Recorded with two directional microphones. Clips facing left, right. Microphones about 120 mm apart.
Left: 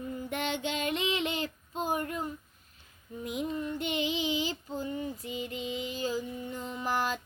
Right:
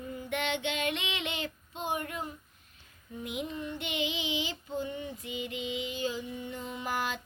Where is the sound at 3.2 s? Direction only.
40° left (ahead or behind).